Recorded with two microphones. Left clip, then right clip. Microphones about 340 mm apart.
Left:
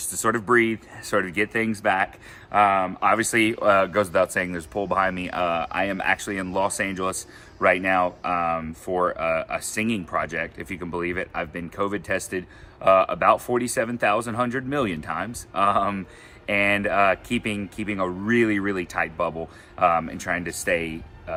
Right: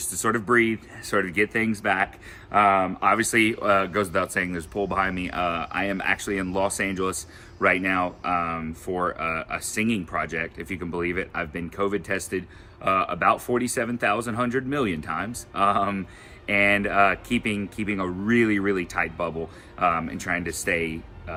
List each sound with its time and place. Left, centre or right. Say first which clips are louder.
0.0 s speech: left 1 dB; centre